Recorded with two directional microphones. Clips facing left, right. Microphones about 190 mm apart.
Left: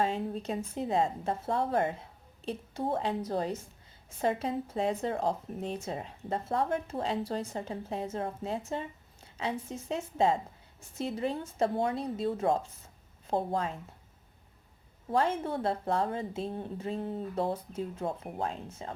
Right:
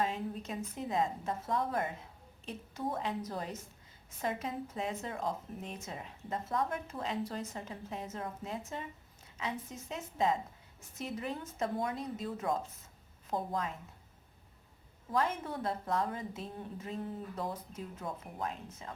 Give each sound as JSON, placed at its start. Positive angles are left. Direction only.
{"t": 0.0, "sound": "a woman's voice", "side_deg": 30}
{"t": 15.1, "sound": "a woman's voice", "side_deg": 30}